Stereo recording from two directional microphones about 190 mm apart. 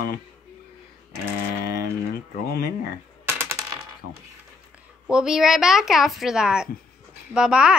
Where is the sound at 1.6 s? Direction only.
55° left (ahead or behind).